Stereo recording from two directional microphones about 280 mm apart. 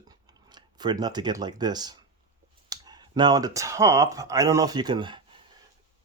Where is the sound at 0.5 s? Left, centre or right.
Centre.